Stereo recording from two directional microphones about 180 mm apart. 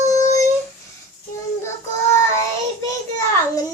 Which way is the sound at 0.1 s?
15° left (ahead or behind).